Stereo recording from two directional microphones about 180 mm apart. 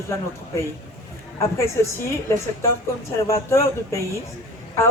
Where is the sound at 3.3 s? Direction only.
15° left (ahead or behind).